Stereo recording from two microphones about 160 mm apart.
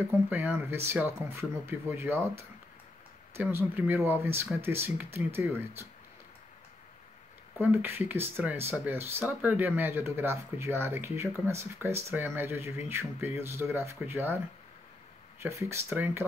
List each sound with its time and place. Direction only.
0.3 s speech: 10° right (ahead or behind)
7.5 s speech: 15° right (ahead or behind)
15.4 s speech: 15° right (ahead or behind)